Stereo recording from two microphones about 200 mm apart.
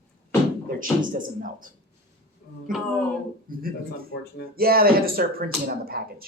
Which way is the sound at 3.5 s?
45° right (ahead or behind).